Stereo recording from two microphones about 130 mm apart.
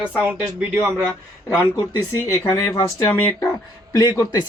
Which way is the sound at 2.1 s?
25° left (ahead or behind).